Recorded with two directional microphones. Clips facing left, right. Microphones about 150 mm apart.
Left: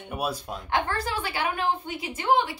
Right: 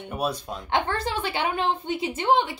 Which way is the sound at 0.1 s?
5° left (ahead or behind).